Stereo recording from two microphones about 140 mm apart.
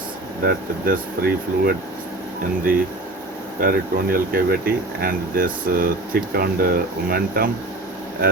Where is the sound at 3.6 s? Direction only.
90° right.